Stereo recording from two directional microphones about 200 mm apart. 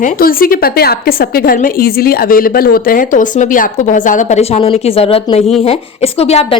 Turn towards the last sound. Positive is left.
turn(degrees=30)  # may be behind; listen again after turning